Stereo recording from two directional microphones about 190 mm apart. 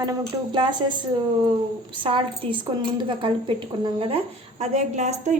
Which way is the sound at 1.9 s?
25° right (ahead or behind).